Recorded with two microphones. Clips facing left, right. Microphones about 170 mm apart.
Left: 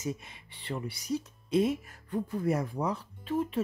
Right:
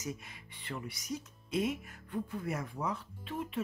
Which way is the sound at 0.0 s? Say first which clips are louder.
Left 5 dB; 25° left (ahead or behind).